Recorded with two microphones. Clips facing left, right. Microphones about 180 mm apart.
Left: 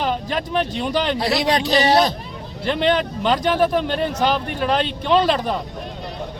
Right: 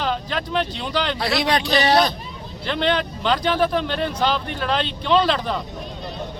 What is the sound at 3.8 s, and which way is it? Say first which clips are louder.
Speech: left 2 dB; 45° left (ahead or behind).